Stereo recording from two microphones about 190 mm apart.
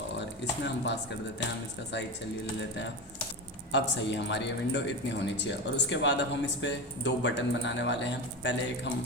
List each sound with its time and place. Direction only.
3.7 s speech: 70° left (ahead or behind)